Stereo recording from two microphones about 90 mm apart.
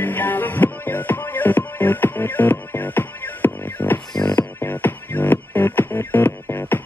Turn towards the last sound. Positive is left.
turn(degrees=20)  # may be behind; listen again after turning